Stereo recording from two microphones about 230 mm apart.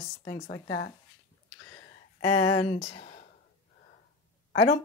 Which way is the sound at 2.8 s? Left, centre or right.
Left.